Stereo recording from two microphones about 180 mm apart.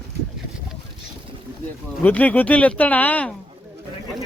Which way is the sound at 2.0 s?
10° left (ahead or behind).